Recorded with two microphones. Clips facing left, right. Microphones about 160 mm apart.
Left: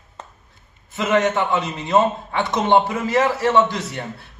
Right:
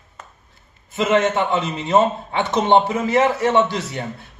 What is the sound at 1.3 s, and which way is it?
A man's voice, 20° right (ahead or behind).